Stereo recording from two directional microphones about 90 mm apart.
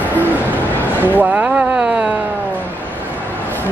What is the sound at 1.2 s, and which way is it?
Speech, 15° right (ahead or behind).